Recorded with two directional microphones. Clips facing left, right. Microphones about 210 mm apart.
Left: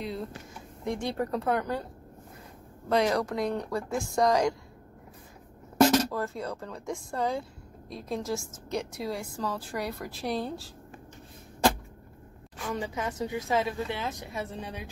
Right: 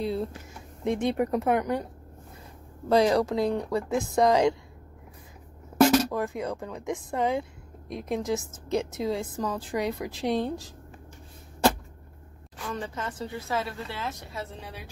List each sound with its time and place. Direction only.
0.8 s a woman's voice: 20° right (ahead or behind)
2.9 s a woman's voice: 30° right (ahead or behind)
5.9 s a woman's voice: 15° right (ahead or behind)
12.6 s a woman's voice: 10° left (ahead or behind)